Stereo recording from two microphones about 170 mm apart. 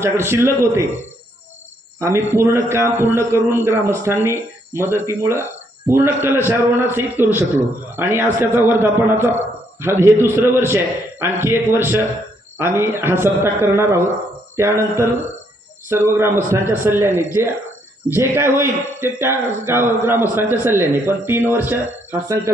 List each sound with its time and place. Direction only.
0.0 s a man's voice: 15° right (ahead or behind)
2.0 s a man's voice: 15° right (ahead or behind)